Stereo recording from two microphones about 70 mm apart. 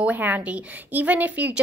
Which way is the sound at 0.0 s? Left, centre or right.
Right.